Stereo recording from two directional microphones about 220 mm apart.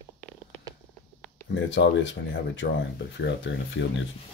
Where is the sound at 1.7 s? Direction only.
55° left (ahead or behind).